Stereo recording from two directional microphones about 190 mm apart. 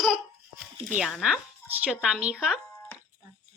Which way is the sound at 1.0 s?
Centre (ahead or behind).